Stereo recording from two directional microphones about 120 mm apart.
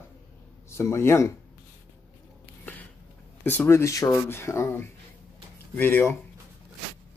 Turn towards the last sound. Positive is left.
turn(degrees=15)  # may be behind; listen again after turning